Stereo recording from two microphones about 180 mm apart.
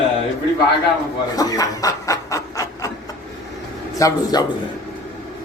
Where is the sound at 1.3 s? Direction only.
20° left (ahead or behind).